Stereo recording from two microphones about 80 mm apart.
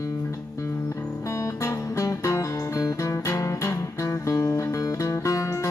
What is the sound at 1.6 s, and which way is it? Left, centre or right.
Music, left.